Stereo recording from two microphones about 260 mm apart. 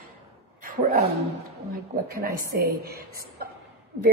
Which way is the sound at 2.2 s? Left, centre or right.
Right.